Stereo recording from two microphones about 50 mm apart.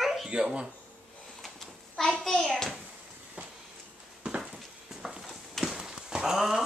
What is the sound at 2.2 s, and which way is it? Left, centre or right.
Hands, centre.